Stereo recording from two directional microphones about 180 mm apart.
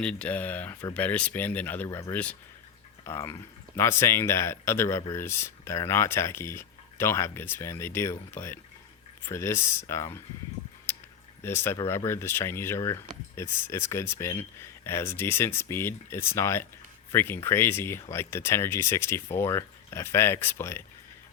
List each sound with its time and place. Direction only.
0.0 s speech: 5° left (ahead or behind)
10.9 s a sound: 10° left (ahead or behind)
11.4 s speech: 15° left (ahead or behind)